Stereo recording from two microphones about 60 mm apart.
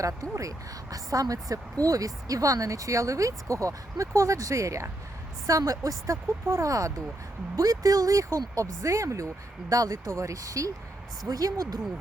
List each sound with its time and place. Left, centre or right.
0.0 s a woman's voice: right
5.5 s a woman's voice: right
7.5 s a woman's voice: right
10.1 s speech: right
11.3 s speech: right